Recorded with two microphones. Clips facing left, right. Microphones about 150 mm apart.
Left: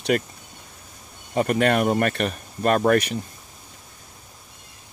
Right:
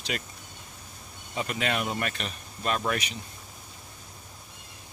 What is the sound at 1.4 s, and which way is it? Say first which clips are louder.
Speech: left 10 dB; 50° left (ahead or behind).